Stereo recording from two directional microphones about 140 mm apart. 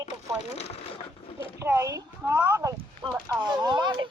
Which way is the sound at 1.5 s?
20° right (ahead or behind).